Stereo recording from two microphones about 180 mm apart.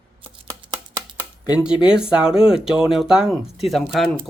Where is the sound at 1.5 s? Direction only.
5° right (ahead or behind).